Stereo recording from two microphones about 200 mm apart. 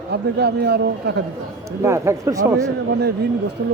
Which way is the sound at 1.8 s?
15° right (ahead or behind).